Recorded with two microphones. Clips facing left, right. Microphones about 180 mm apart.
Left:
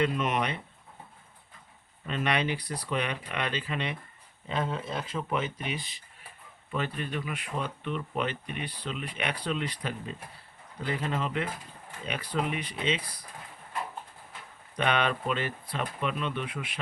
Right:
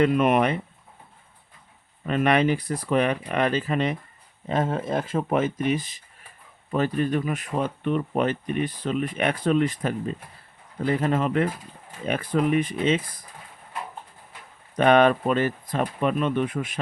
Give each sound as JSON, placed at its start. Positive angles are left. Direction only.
{"t": 0.0, "sound": "speech", "side_deg": -55}
{"t": 2.0, "sound": "speech", "side_deg": -50}
{"t": 14.8, "sound": "speech", "side_deg": -45}